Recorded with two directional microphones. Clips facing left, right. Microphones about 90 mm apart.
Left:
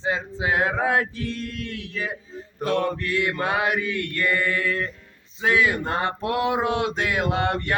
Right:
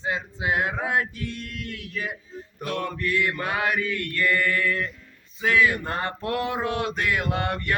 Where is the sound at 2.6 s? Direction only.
30° left (ahead or behind).